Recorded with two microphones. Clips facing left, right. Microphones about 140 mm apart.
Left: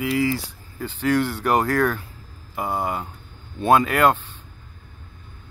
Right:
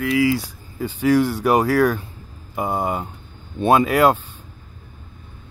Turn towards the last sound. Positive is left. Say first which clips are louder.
# right 2 dB
turn(degrees=-10)  # may be behind; listen again after turning